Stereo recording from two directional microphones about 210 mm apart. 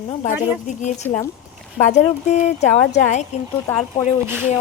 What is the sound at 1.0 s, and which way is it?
Speech, 10° left (ahead or behind).